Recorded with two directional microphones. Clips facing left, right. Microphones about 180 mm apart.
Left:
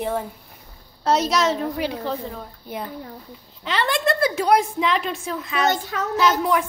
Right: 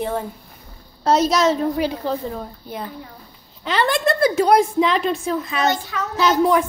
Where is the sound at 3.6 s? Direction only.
45° right (ahead or behind).